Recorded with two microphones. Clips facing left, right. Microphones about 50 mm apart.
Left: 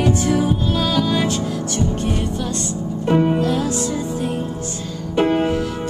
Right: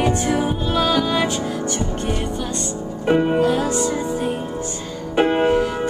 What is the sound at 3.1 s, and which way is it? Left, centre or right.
Music, centre.